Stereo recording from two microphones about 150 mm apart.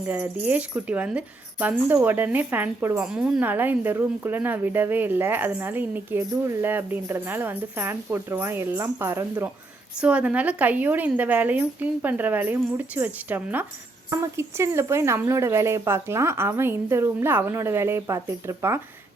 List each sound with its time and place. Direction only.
0.0 s a woman's voice: 10° right (ahead or behind)